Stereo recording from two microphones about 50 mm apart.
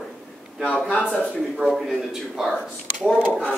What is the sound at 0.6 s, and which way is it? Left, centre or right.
Speech, left.